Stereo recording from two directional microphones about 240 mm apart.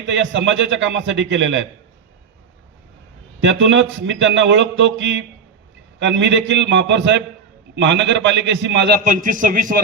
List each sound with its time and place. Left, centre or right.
0.0 s a man's voice: right
3.4 s a man's voice: right
9.0 s a man's voice: right